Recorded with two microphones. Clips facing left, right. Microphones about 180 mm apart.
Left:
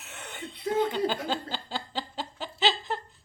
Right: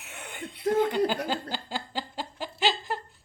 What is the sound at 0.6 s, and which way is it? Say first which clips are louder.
Chuckle: right 3 dB; 50° right (ahead or behind).